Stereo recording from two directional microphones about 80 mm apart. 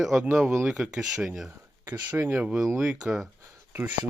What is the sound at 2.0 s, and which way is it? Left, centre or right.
Speech, right.